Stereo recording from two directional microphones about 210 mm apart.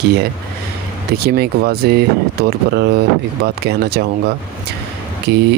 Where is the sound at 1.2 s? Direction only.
50° right (ahead or behind).